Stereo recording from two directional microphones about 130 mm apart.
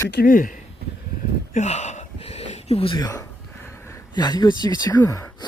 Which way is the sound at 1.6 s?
60° left (ahead or behind).